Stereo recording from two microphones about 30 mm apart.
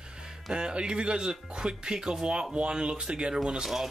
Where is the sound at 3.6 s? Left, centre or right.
Centre.